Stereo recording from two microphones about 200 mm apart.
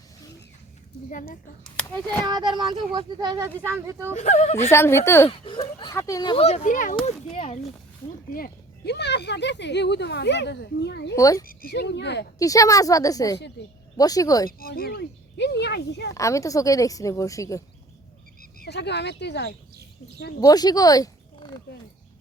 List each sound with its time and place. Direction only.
1.6 s a child's voice: 5° left (ahead or behind)
2.2 s speech: 20° right (ahead or behind)
4.1 s a child's voice: 35° left (ahead or behind)
4.7 s a child's voice: 10° left (ahead or behind); by 7.6 s 30° left (ahead or behind)
8.3 s speech: 50° left (ahead or behind)
11.1 s speech: 15° left (ahead or behind)
11.4 s speech: 50° left (ahead or behind)
12.4 s speech: 15° left (ahead or behind)
14.6 s speech: 50° left (ahead or behind)
16.1 s speech: 15° left (ahead or behind)
18.3 s speech: 55° left (ahead or behind)
20.4 s speech: 20° left (ahead or behind)